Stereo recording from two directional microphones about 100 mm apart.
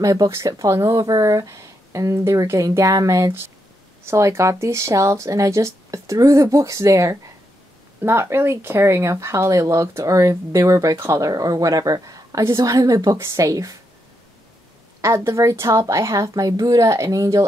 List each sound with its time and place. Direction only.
0.0 s speech: 35° right (ahead or behind)
15.0 s speech: 30° right (ahead or behind)